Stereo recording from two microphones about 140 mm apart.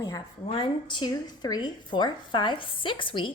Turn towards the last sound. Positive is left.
turn(degrees=35)  # may be behind; listen again after turning